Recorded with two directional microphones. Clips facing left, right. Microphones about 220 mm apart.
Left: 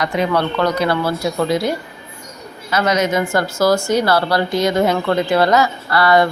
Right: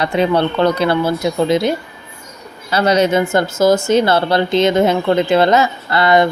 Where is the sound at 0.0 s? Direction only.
30° right (ahead or behind).